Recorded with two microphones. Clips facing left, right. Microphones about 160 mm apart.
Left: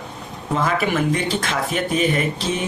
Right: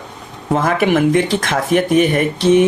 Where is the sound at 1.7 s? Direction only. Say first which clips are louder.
Right 9 dB; 70° right (ahead or behind).